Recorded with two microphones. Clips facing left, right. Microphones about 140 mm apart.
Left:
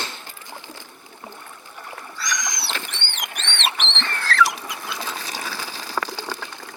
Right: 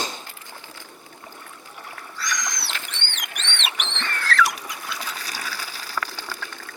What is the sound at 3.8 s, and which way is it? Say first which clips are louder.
Rodents: left 1 dB; 30° left (ahead or behind).